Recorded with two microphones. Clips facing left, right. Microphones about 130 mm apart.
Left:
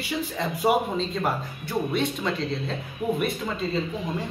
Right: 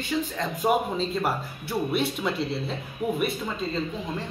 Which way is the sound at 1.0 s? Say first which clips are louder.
Even; 5° right (ahead or behind).